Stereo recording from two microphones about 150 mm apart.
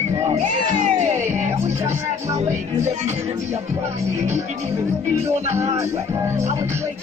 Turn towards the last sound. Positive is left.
turn(degrees=-20)  # may be behind; listen again after turning